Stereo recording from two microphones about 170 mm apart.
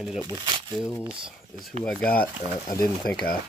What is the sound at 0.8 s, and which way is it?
Speech, 5° right (ahead or behind).